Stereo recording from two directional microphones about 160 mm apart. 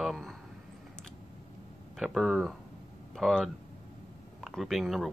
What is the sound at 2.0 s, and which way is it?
Speech, centre (ahead or behind).